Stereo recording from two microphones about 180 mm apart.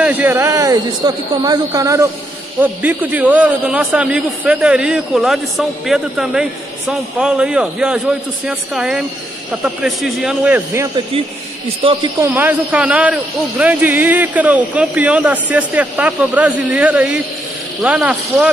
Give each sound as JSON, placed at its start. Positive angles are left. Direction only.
{"t": 0.0, "sound": "a man's voice", "side_deg": -10}
{"t": 11.8, "sound": "speech", "side_deg": -30}
{"t": 12.2, "sound": "speech", "side_deg": -10}